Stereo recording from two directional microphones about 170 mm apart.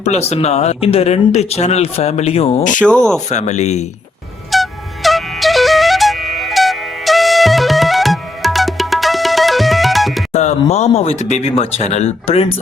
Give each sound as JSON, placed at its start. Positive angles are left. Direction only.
{"t": 0.0, "sound": "speech", "side_deg": 40}
{"t": 2.8, "sound": "speech", "side_deg": 5}
{"t": 3.2, "sound": "speech", "side_deg": 45}
{"t": 4.5, "sound": "music", "side_deg": 0}
{"t": 10.3, "sound": "speech", "side_deg": 40}